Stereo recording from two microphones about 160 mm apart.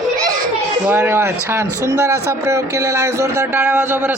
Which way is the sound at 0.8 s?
15° right (ahead or behind).